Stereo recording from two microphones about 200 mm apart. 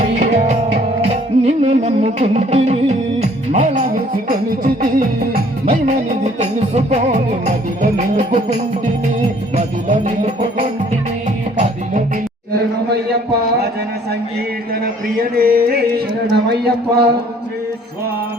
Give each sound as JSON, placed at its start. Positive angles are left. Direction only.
{"t": 0.2, "sound": "music", "side_deg": -35}
{"t": 9.6, "sound": "music", "side_deg": -35}
{"t": 15.2, "sound": "a sound", "side_deg": -50}